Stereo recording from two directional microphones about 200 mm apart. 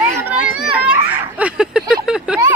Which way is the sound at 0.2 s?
5° right (ahead or behind).